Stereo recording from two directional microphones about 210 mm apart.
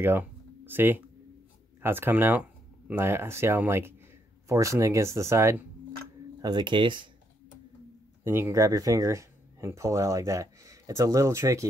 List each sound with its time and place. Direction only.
0.0 s speech: 10° right (ahead or behind)
8.2 s speech: 10° right (ahead or behind)